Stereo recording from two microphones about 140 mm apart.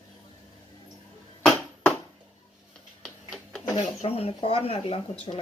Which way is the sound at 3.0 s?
Centre (ahead or behind).